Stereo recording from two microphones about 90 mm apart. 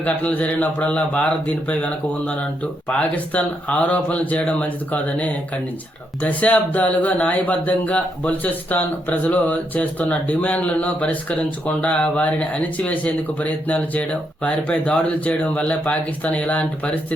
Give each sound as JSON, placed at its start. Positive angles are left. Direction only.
{"t": 0.0, "sound": "speech", "side_deg": 15}